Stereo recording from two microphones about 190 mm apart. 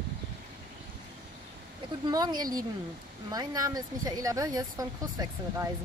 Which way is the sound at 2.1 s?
20° right (ahead or behind).